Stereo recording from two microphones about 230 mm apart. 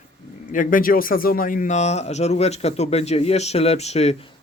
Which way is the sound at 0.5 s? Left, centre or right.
Left.